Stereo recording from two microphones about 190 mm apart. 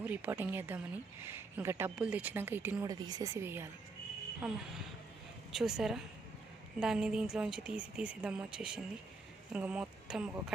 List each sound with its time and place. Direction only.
0.0 s a woman's voice: 10° right (ahead or behind)